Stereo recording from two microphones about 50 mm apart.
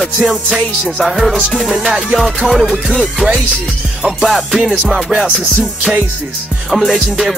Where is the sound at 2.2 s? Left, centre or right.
Centre.